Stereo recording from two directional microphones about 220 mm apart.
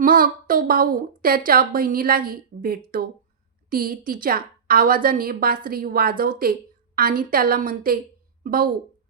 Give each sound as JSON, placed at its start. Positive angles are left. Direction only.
{"t": 0.0, "sound": "a woman's voice", "side_deg": -40}